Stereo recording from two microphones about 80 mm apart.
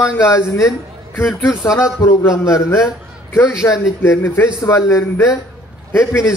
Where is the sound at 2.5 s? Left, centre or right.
Left.